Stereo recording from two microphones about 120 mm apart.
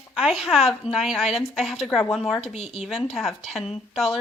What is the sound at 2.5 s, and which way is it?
Speech, 55° left (ahead or behind).